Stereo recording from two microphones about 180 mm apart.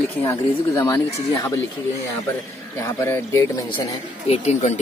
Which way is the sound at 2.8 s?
15° left (ahead or behind).